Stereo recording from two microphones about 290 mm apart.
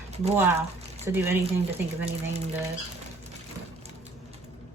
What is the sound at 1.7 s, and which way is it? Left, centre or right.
Speech, right.